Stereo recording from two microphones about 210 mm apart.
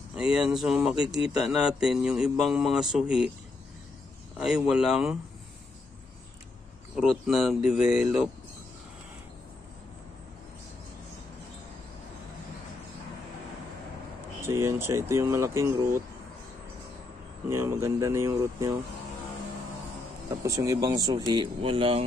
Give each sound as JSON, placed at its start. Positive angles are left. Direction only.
{"t": 0.1, "sound": "speech", "side_deg": -5}
{"t": 4.4, "sound": "speech", "side_deg": 0}
{"t": 7.0, "sound": "speech", "side_deg": 0}
{"t": 14.4, "sound": "speech", "side_deg": -15}
{"t": 17.5, "sound": "speech", "side_deg": -10}
{"t": 20.4, "sound": "speech", "side_deg": -15}